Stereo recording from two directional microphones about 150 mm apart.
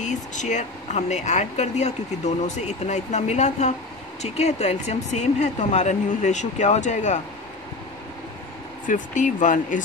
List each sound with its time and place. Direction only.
0.0 s speech: 55° left (ahead or behind)
8.8 s speech: 60° left (ahead or behind)